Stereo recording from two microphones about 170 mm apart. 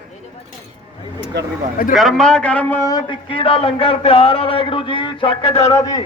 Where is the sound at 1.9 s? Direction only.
Centre (ahead or behind); by 5.7 s 35° left (ahead or behind).